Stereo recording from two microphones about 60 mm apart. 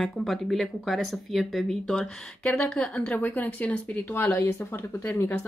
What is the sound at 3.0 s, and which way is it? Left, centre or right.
Speech, left.